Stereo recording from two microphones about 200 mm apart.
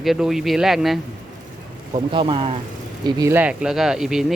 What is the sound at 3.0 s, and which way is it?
Speech, 15° right (ahead or behind).